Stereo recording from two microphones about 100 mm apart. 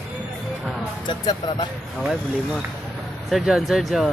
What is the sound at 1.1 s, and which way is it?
Speech, 50° left (ahead or behind).